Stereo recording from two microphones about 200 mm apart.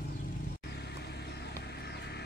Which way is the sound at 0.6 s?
55° left (ahead or behind).